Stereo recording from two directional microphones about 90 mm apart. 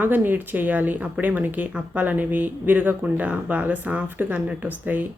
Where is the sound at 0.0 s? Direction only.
20° right (ahead or behind).